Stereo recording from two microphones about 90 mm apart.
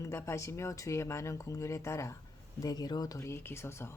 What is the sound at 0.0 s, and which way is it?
Speech, 30° left (ahead or behind).